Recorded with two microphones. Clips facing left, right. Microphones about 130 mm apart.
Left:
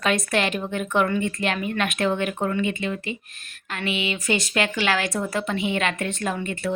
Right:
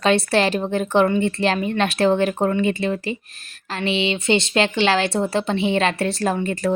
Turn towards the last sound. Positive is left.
turn(degrees=-40)  # may be behind; listen again after turning